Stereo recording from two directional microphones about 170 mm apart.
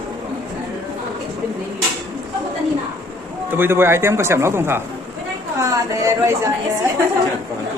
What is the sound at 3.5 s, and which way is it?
A man's voice, 15° right (ahead or behind).